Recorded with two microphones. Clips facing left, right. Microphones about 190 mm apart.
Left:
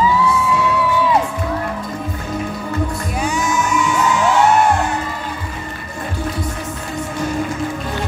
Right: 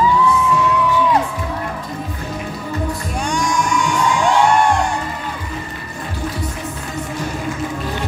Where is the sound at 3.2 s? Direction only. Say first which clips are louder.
Even; 5° left (ahead or behind).